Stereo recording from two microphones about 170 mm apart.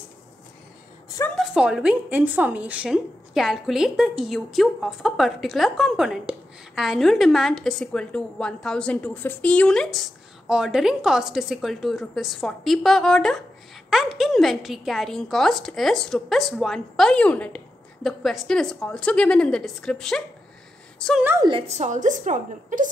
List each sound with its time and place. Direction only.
1.3 s a woman's voice: 5° right (ahead or behind)
21.2 s a woman's voice: 10° right (ahead or behind)
21.5 s a woman's voice: 35° right (ahead or behind)